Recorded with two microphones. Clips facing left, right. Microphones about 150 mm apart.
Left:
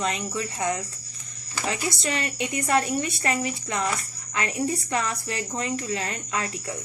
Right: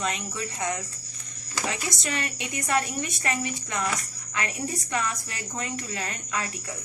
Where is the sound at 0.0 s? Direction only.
35° left (ahead or behind).